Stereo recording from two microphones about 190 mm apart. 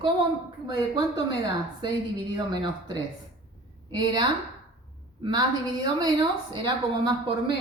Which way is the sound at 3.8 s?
20° right (ahead or behind).